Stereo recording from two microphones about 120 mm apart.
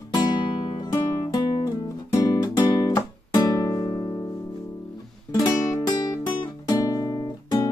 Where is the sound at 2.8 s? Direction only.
30° left (ahead or behind).